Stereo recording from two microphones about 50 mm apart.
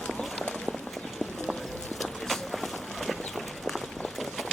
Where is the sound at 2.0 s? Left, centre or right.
Centre.